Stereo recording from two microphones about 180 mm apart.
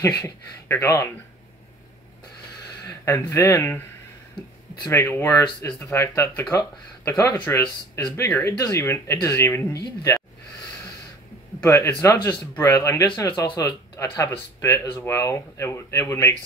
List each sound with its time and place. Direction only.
0.2 s speech: 15° left (ahead or behind)
3.1 s speech: 15° left (ahead or behind)
4.8 s speech: 15° left (ahead or behind)
11.6 s speech: 15° left (ahead or behind)